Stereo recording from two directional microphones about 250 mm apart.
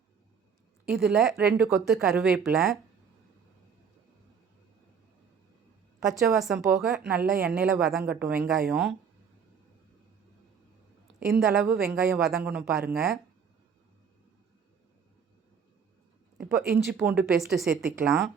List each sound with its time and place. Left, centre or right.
0.9 s speech: centre
6.1 s speech: centre
11.3 s speech: centre
16.4 s speech: centre